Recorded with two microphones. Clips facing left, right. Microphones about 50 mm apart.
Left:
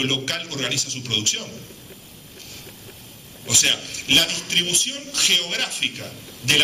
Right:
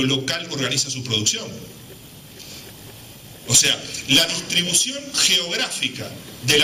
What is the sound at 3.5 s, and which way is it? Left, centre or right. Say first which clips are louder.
A man's voice: even; left.